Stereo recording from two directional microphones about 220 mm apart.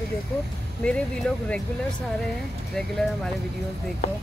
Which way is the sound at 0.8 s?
5° left (ahead or behind).